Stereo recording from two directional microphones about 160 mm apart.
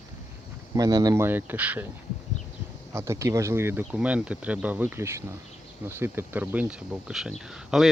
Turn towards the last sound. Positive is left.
turn(degrees=0)  # may be behind; listen again after turning